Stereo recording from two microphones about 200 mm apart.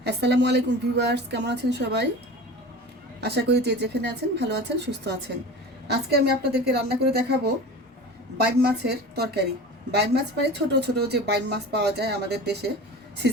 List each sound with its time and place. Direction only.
0.0 s a woman's voice: 55° right (ahead or behind)
3.2 s a woman's voice: 55° right (ahead or behind)
8.6 s a woman's voice: 55° right (ahead or behind)